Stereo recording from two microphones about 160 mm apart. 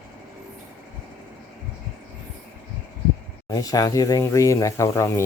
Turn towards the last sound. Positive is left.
turn(degrees=20)  # may be behind; listen again after turning